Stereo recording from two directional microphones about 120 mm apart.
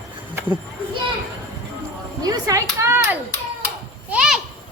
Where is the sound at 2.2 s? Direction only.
30° right (ahead or behind).